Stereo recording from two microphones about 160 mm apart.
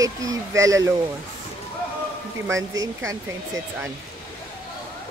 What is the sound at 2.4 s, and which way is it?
Speech, 20° right (ahead or behind).